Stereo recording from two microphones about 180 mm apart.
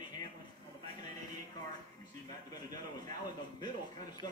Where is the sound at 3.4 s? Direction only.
25° left (ahead or behind).